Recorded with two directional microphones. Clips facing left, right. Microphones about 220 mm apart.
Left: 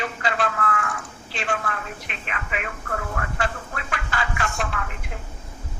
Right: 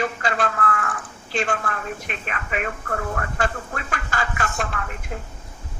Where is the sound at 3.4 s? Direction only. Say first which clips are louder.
Right 3 dB; 45° right (ahead or behind).